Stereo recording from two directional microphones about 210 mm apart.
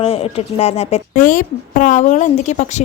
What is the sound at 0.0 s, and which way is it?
Speech, 30° left (ahead or behind).